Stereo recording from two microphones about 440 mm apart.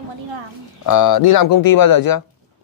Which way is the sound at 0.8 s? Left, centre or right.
Left.